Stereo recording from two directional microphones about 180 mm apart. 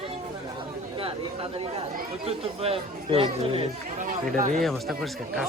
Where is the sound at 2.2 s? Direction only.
35° right (ahead or behind).